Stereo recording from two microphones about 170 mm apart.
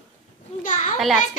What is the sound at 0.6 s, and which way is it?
Speech, 50° left (ahead or behind).